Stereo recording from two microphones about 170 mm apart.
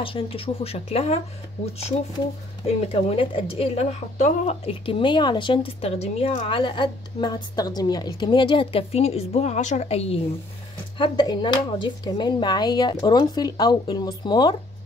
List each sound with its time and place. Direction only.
0.0 s a woman's voice: 30° left (ahead or behind)
2.6 s a woman's voice: 35° left (ahead or behind)